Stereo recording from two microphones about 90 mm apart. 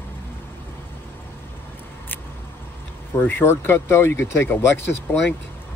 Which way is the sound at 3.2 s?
25° left (ahead or behind).